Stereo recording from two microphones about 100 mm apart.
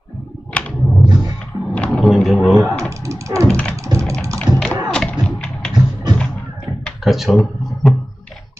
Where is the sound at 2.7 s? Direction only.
30° right (ahead or behind).